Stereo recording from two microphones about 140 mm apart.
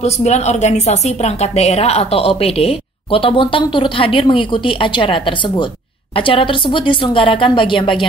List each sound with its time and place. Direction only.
0.0 s a woman's voice: 55° left (ahead or behind); by 8.1 s 35° left (ahead or behind)